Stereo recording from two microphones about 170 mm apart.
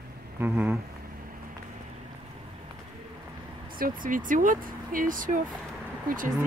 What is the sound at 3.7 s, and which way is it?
Speech, 55° right (ahead or behind).